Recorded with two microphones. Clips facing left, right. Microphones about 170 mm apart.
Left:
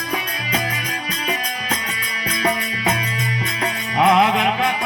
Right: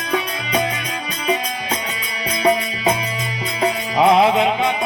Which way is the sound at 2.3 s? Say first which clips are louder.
Right 5 dB; 25° right (ahead or behind).